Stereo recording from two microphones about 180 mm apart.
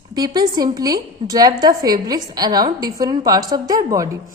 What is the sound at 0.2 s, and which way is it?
A woman's voice, 20° right (ahead or behind).